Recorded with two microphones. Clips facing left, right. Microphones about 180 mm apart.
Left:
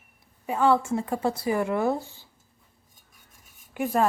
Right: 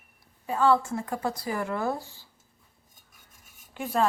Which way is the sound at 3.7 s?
10° left (ahead or behind).